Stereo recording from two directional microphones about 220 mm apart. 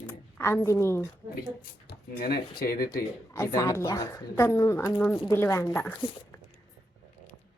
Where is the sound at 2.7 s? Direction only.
15° left (ahead or behind).